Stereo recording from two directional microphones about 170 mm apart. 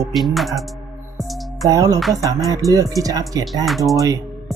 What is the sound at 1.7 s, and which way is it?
Speech, 20° right (ahead or behind).